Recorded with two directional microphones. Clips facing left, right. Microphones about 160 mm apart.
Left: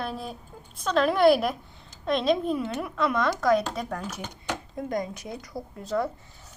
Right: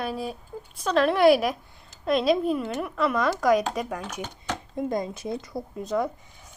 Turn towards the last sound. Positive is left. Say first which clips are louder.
# right 1 dB
turn(degrees=-20)  # may be behind; listen again after turning